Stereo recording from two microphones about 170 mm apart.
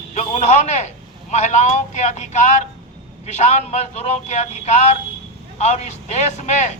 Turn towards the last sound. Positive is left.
turn(degrees=45)  # may be behind; listen again after turning